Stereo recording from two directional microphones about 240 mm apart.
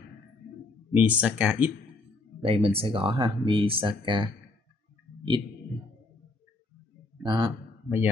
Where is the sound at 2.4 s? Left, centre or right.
Right.